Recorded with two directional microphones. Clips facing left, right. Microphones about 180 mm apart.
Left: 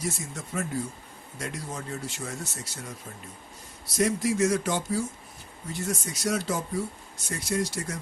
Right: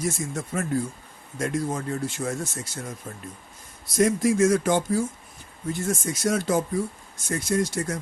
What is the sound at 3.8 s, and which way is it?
A man's voice, 50° right (ahead or behind).